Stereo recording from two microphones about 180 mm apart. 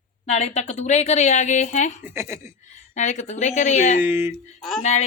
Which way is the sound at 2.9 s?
40° left (ahead or behind).